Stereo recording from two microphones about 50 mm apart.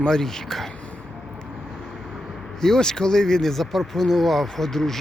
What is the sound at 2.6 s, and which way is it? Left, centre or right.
Speech, centre.